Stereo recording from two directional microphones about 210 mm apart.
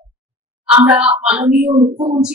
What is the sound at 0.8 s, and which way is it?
Speech, 5° right (ahead or behind).